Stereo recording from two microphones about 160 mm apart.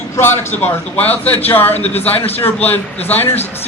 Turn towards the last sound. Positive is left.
turn(degrees=10)  # may be behind; listen again after turning